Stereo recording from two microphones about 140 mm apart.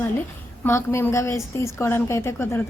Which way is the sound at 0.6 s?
20° left (ahead or behind).